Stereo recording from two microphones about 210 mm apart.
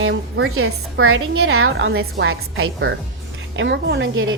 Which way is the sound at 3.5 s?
60° right (ahead or behind).